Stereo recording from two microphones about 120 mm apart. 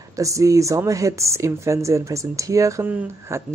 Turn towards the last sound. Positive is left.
turn(degrees=-20)  # may be behind; listen again after turning